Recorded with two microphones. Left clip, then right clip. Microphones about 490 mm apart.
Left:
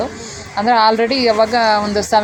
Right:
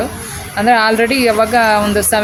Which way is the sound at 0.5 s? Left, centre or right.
Right.